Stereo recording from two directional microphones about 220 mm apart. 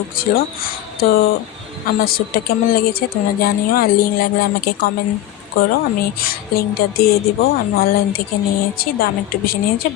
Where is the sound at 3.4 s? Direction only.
40° left (ahead or behind).